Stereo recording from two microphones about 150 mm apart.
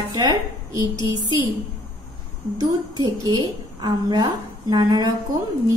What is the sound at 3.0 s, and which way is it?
A woman's voice, 30° right (ahead or behind).